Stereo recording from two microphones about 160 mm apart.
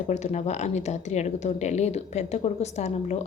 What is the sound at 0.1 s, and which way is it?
Speech, 45° left (ahead or behind).